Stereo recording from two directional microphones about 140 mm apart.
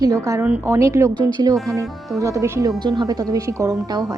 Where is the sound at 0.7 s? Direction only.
20° right (ahead or behind).